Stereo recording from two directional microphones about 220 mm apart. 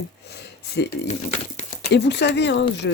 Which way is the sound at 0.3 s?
50° left (ahead or behind).